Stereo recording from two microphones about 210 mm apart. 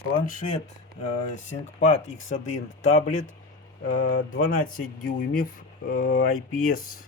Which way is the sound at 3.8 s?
40° left (ahead or behind).